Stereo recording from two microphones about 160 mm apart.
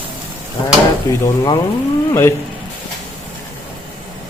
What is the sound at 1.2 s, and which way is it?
A man's voice, 20° left (ahead or behind).